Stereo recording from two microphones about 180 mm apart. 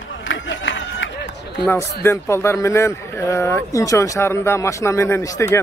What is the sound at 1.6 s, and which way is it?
A man's voice, 15° left (ahead or behind).